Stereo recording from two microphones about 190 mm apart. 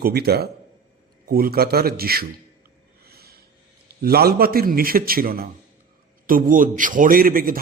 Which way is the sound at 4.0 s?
55° right (ahead or behind).